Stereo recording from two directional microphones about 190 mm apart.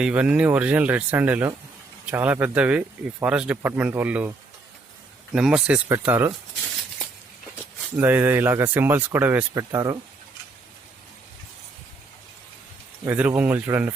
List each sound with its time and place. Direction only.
0.0 s speech: 5° right (ahead or behind)
5.3 s speech: 5° right (ahead or behind)
7.9 s speech: 10° right (ahead or behind)
13.1 s speech: 10° right (ahead or behind)